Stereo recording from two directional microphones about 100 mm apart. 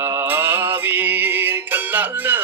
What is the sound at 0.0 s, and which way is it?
Music, 25° right (ahead or behind).